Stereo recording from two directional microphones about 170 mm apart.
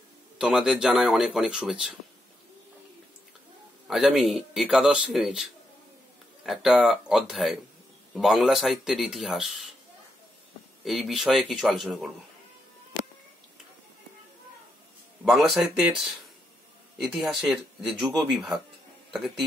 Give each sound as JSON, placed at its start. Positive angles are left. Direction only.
{"t": 0.4, "sound": "a man's voice", "side_deg": -5}
{"t": 3.8, "sound": "a man's voice", "side_deg": 0}
{"t": 10.8, "sound": "a man's voice", "side_deg": 0}
{"t": 15.2, "sound": "a man's voice", "side_deg": 0}